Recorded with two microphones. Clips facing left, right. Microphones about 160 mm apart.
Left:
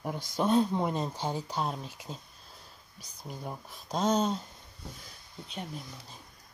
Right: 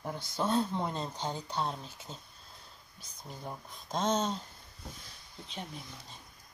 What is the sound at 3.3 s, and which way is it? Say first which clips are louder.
Speech: left 3 dB; 5° left (ahead or behind).